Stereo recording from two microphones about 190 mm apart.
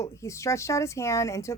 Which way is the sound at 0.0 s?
15° left (ahead or behind).